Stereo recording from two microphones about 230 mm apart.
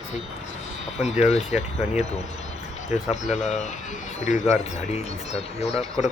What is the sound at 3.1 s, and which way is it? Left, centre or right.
Speech, left.